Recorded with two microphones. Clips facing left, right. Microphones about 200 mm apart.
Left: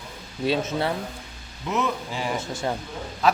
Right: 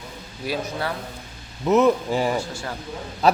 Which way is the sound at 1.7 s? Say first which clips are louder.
Right 9 dB; 40° right (ahead or behind).